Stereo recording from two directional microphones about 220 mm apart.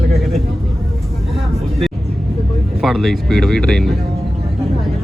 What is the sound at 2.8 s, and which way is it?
Speech, centre (ahead or behind).